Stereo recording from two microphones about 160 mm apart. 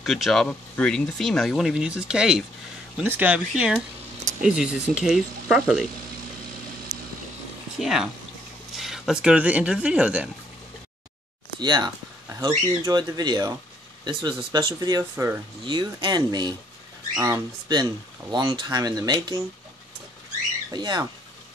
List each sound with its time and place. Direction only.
0.0 s speech: centre (ahead or behind)
7.8 s speech: 5° right (ahead or behind)
11.6 s speech: 25° right (ahead or behind)
15.6 s speech: 30° right (ahead or behind)
20.7 s speech: 25° right (ahead or behind)